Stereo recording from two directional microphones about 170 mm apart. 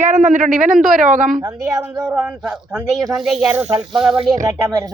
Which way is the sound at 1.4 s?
15° right (ahead or behind).